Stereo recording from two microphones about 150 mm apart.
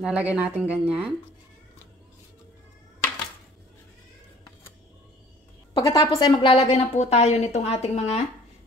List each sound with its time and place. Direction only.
0.0 s speech: 10° right (ahead or behind)
5.8 s a woman's voice: 25° left (ahead or behind)
6.3 s a woman's voice: 40° left (ahead or behind)